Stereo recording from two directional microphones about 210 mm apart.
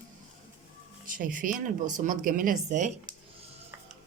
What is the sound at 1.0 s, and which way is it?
Speech, 40° right (ahead or behind).